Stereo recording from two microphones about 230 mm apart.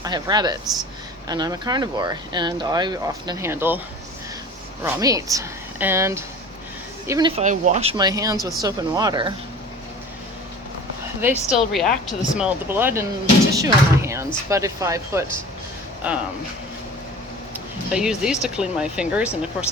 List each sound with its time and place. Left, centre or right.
0.0 s speech: centre
4.8 s speech: centre
7.4 s speech: right
11.2 s speech: centre
17.5 s speech: centre